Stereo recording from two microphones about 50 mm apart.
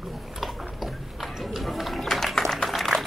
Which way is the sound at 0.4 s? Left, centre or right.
Centre.